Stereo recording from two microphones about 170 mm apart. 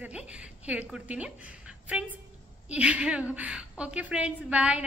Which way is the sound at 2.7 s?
5° right (ahead or behind).